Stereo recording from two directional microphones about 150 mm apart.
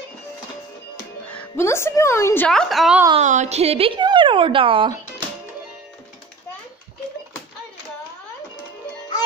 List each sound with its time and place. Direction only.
1.3 s a woman's voice: 15° left (ahead or behind)
2.5 s a woman's voice: centre (ahead or behind)
3.2 s a woman's voice: 50° right (ahead or behind); by 4.9 s 35° right (ahead or behind)